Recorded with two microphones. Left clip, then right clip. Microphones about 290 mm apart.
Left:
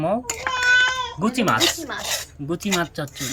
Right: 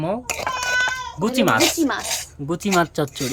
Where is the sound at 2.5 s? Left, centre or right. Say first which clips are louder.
Right 4 dB; centre.